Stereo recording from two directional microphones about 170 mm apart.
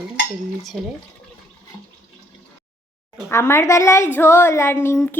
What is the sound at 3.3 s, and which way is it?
Music, 15° left (ahead or behind).